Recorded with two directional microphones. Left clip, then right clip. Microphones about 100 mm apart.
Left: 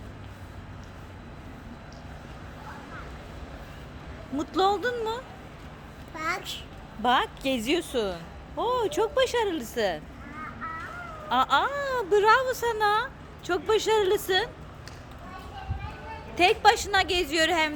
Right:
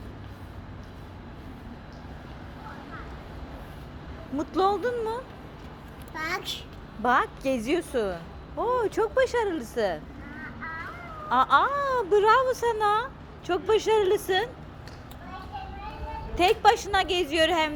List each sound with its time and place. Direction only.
4.4 s speech: 15° left (ahead or behind)
11.3 s speech: 15° left (ahead or behind)
16.3 s speech: 5° left (ahead or behind)